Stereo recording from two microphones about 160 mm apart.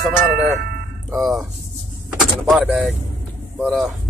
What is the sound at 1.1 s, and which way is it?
Speech, centre (ahead or behind).